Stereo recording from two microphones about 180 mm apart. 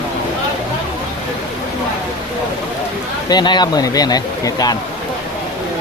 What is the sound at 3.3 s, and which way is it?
Speech, 25° left (ahead or behind).